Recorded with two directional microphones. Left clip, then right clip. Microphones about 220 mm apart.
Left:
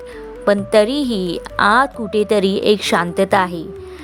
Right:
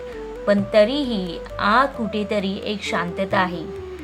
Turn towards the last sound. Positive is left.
turn(degrees=50)  # may be behind; listen again after turning